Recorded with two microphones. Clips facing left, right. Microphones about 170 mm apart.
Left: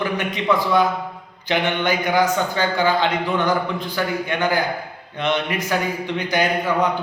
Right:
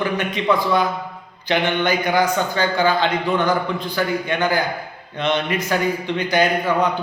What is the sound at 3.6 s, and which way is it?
Speech, 15° right (ahead or behind).